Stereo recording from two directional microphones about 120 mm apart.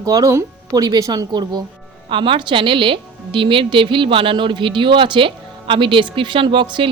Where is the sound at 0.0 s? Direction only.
30° right (ahead or behind).